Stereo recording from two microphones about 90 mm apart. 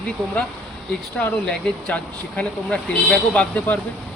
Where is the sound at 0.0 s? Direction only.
10° left (ahead or behind).